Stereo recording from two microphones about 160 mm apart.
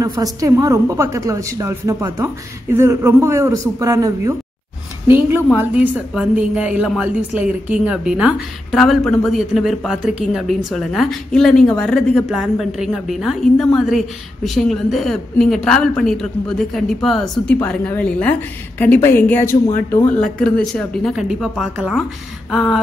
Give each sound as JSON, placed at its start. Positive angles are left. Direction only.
{"t": 0.0, "sound": "a woman's voice", "side_deg": -20}